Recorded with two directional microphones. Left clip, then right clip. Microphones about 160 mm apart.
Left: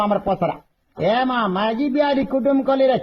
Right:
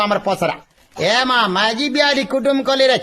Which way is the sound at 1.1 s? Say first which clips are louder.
Right 6 dB; 25° right (ahead or behind).